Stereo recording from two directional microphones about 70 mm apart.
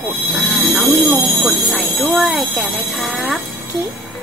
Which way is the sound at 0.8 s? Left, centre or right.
Centre.